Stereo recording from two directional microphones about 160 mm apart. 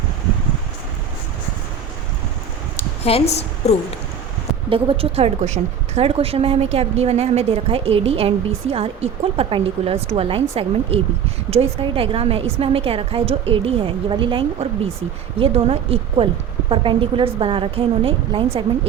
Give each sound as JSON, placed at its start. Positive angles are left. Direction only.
{"t": 3.0, "sound": "a woman's voice", "side_deg": 40}
{"t": 4.7, "sound": "a woman's voice", "side_deg": -35}